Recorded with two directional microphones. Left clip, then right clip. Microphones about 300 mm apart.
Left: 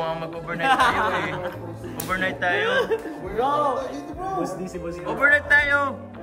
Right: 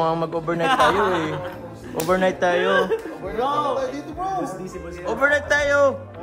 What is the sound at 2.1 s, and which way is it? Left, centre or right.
Speech, centre.